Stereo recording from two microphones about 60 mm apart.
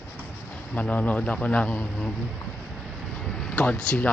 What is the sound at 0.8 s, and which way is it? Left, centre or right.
Speech, left.